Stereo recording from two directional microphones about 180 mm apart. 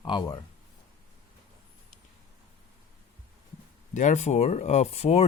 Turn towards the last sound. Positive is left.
turn(degrees=35)  # may be behind; listen again after turning